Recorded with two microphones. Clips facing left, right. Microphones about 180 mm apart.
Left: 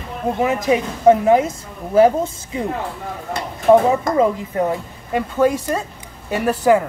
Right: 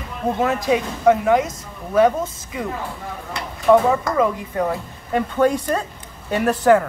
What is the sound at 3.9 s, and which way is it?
Speech, 20° left (ahead or behind).